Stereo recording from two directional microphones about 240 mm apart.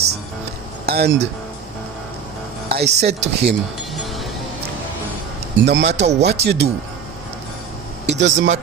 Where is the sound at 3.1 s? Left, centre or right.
Right.